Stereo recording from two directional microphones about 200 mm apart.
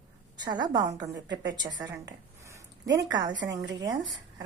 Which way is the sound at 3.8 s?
20° right (ahead or behind).